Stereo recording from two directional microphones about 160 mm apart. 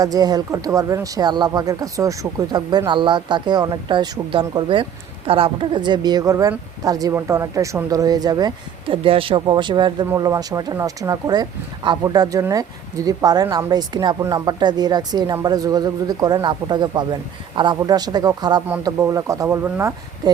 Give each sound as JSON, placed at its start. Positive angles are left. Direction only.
{"t": 0.0, "sound": "speech", "side_deg": -25}
{"t": 19.6, "sound": "speech", "side_deg": -10}